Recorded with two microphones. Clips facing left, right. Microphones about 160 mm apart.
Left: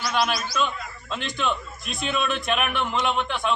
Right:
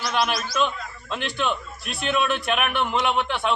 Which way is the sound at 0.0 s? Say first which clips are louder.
Even; centre (ahead or behind).